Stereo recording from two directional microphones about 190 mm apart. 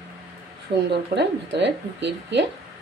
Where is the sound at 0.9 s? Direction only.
65° right (ahead or behind).